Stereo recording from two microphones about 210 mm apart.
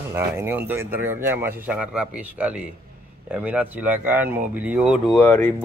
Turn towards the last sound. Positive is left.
turn(degrees=10)  # may be behind; listen again after turning